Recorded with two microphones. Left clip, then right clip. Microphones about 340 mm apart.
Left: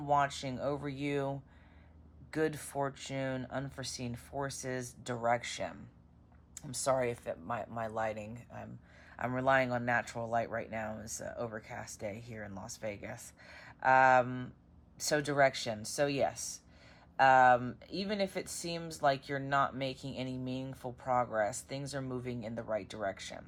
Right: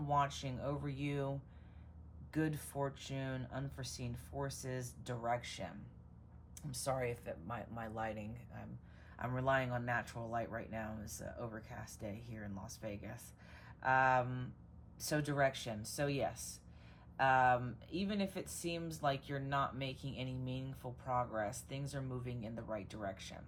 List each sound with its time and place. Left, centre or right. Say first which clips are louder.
0.1 s speech: left 6 dB; left
6.7 s speech: left 7 dB; centre